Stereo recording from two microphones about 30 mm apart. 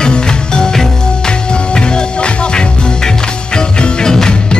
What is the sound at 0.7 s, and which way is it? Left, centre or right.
Music, centre.